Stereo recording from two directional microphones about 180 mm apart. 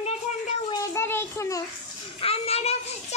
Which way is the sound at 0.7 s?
15° left (ahead or behind).